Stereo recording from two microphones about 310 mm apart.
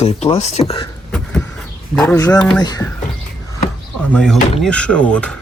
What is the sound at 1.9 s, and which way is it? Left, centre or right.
Speech, centre.